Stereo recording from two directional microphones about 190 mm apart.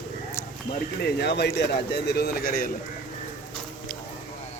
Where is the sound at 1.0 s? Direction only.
60° left (ahead or behind).